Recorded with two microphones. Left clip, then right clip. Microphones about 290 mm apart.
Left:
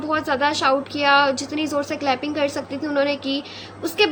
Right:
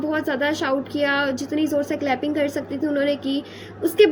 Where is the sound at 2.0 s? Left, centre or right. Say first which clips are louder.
Left 1 dB; left.